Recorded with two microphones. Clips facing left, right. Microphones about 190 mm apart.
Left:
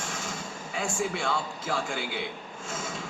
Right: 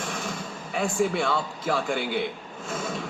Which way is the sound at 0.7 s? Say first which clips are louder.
Right 6 dB; 55° right (ahead or behind).